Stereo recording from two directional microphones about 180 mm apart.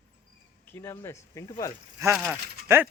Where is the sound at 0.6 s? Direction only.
15° left (ahead or behind).